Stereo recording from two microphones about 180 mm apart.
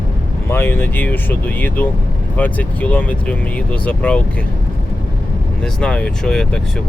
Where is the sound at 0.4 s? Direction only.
10° left (ahead or behind).